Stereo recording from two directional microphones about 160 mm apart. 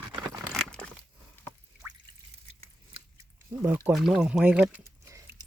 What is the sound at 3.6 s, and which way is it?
Speech, 15° right (ahead or behind).